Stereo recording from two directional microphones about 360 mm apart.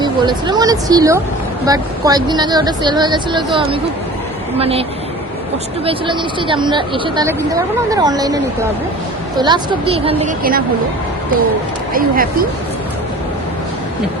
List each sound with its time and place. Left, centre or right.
0.0 s speech: centre
4.5 s speech: centre
9.4 s speech: centre
11.9 s speech: right